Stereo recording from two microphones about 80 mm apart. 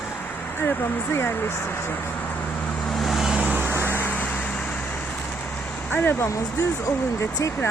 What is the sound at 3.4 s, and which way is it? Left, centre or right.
Vehicle, right.